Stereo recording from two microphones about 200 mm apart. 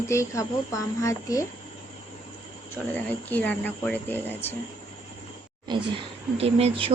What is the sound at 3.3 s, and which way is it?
A woman's voice, 10° left (ahead or behind).